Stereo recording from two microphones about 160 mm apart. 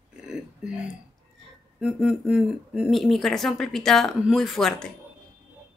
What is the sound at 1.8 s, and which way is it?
Speech, 5° right (ahead or behind).